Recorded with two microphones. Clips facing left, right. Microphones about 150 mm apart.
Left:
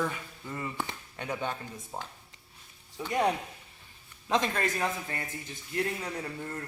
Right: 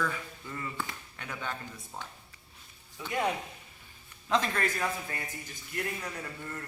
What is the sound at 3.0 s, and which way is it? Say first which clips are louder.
Speech: left 4 dB; 35° left (ahead or behind).